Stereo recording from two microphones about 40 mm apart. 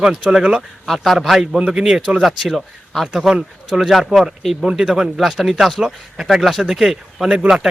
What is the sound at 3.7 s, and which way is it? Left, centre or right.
Speech, centre.